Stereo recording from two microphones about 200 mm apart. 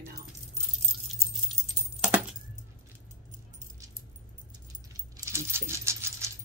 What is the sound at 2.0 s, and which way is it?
Keys jangling, 5° right (ahead or behind).